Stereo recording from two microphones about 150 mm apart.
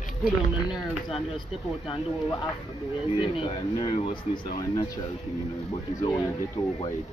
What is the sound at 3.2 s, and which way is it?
Speech, 35° left (ahead or behind).